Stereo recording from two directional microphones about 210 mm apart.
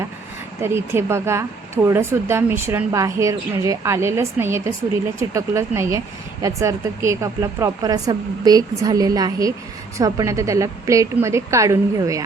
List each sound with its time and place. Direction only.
0.6 s speech: 10° right (ahead or behind)